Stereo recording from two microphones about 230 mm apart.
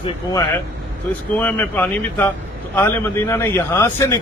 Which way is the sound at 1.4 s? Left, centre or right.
Centre.